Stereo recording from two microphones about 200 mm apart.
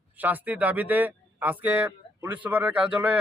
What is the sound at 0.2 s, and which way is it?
Speech, 10° right (ahead or behind).